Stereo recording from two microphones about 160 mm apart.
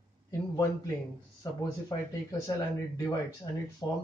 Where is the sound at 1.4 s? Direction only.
20° left (ahead or behind).